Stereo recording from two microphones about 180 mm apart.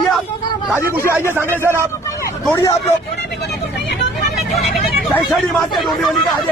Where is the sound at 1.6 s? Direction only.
15° right (ahead or behind).